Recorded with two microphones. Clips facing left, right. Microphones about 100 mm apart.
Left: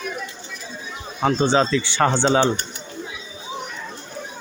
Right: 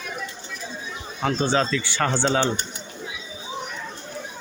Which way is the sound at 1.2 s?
20° left (ahead or behind).